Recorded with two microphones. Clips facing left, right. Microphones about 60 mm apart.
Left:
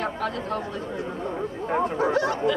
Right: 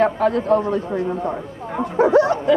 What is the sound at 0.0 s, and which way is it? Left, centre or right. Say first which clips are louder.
Speech: right 11 dB; right.